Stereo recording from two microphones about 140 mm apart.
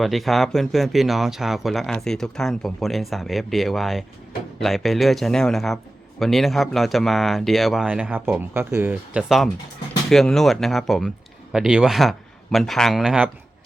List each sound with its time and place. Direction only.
0.0 s a man's voice: centre (ahead or behind)